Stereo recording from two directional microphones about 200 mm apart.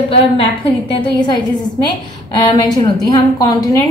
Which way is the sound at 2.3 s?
20° left (ahead or behind).